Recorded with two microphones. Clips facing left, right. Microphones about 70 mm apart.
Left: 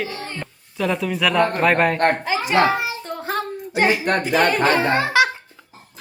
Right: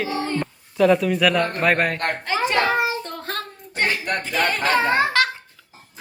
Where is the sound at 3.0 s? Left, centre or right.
Centre.